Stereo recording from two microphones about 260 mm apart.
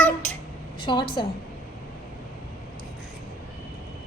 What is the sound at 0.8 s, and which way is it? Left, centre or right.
Speech, centre.